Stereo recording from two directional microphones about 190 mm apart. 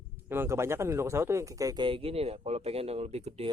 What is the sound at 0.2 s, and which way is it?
Speech, 10° right (ahead or behind).